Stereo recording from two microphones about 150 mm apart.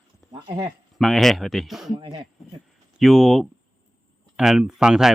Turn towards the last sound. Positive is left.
turn(degrees=-5)  # may be behind; listen again after turning